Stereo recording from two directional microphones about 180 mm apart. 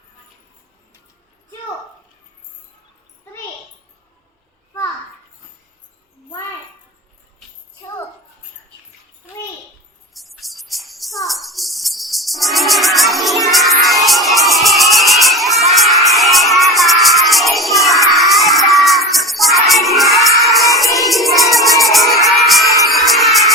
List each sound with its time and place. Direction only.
10.2 s music: centre (ahead or behind)